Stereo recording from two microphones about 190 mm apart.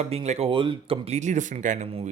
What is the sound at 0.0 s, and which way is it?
Speech, 35° right (ahead or behind).